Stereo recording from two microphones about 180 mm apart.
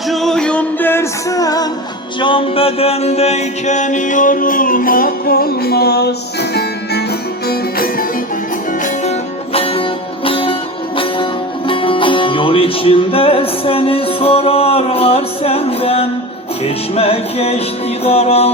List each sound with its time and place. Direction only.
0.1 s music: centre (ahead or behind); by 8.0 s 55° left (ahead or behind)
8.8 s music: 35° left (ahead or behind)